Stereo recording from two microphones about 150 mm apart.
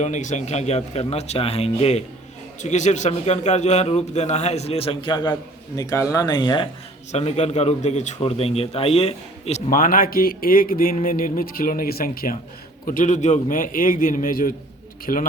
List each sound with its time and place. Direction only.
0.0 s a man's voice: 55° left (ahead or behind); by 6.7 s 30° left (ahead or behind)
7.1 s a man's voice: 45° left (ahead or behind)
9.6 s speech: 70° left (ahead or behind)
12.8 s a man's voice: 65° left (ahead or behind)